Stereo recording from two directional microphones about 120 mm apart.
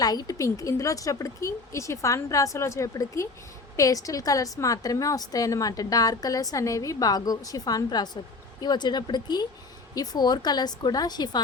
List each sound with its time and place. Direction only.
0.0 s a woman's voice: 30° left (ahead or behind)